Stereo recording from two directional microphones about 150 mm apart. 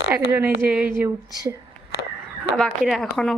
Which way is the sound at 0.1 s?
10° right (ahead or behind).